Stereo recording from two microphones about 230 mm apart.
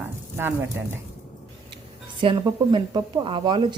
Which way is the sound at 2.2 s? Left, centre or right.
Centre.